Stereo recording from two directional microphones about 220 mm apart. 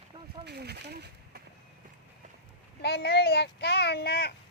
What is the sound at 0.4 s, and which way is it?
Speech, 50° right (ahead or behind).